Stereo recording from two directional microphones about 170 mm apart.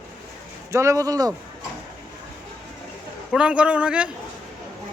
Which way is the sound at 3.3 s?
5° right (ahead or behind).